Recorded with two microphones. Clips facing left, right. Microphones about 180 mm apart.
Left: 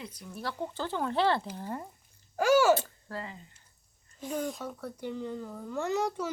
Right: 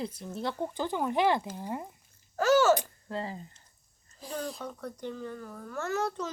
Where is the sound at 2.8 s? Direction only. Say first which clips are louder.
Right 2 dB; 15° right (ahead or behind).